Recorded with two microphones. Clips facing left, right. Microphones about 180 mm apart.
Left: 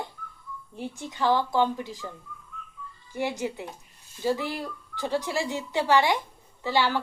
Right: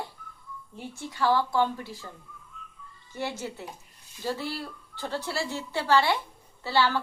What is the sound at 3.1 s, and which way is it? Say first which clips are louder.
Speech: left 4 dB; 15° left (ahead or behind).